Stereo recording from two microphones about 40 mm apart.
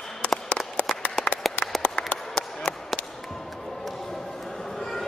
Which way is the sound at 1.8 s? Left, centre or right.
Left.